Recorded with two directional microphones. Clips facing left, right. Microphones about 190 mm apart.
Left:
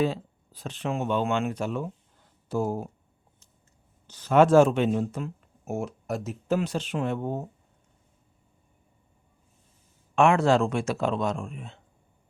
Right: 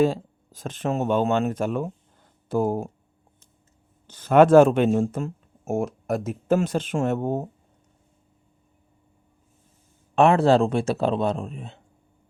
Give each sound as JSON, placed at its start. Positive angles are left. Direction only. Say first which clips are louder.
{"t": 0.0, "sound": "speech", "louder": "right 5 dB", "side_deg": -45}
{"t": 4.0, "sound": "speech", "louder": "right 4 dB", "side_deg": -55}
{"t": 10.2, "sound": "speech", "louder": "right 3 dB", "side_deg": -35}